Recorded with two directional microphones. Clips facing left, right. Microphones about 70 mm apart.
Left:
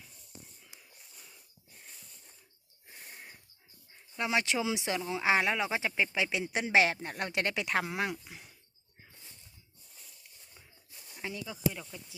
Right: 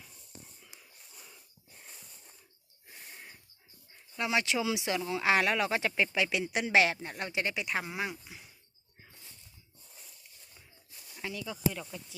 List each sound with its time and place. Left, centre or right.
2.9 s a sound: centre
4.2 s speech: left
4.9 s speech: centre; by 8.1 s left
8.3 s speech: left
11.2 s speech: left
11.8 s speech: centre